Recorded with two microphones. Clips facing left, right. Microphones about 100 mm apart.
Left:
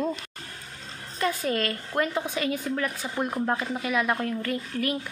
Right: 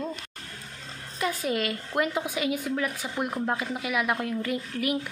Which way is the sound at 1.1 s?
10° right (ahead or behind).